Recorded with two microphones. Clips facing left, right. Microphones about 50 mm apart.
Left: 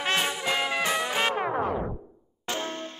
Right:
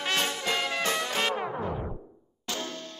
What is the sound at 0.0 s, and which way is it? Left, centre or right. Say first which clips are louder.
Music: left 2 dB; centre.